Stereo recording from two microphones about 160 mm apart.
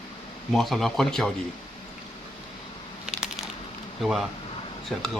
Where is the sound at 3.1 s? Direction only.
5° right (ahead or behind).